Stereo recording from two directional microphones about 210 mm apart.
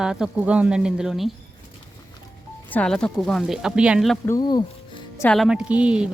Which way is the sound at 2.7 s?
5° left (ahead or behind).